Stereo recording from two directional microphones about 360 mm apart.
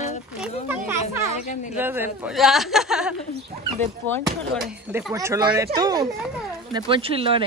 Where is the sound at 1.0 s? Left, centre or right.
Centre.